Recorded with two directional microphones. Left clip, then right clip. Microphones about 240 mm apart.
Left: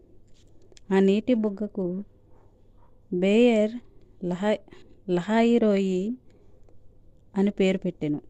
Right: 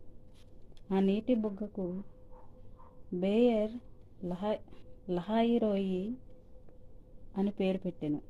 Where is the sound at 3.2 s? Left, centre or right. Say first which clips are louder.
Left 8 dB; left.